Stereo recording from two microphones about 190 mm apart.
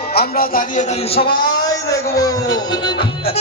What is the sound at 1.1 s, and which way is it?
Music, 25° left (ahead or behind).